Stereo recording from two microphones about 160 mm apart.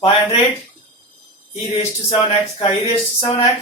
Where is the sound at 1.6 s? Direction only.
40° left (ahead or behind).